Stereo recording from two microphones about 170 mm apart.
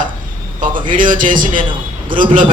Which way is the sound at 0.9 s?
50° right (ahead or behind).